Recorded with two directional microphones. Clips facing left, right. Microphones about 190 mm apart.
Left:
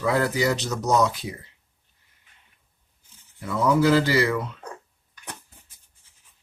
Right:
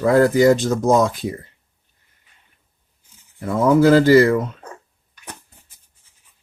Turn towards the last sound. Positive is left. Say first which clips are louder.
# right 10 dB
turn(degrees=-45)  # may be behind; listen again after turning